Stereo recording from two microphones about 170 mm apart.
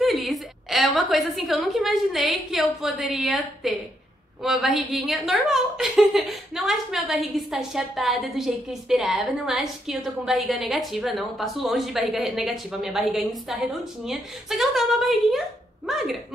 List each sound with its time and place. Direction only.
0.0 s a woman's voice: centre (ahead or behind)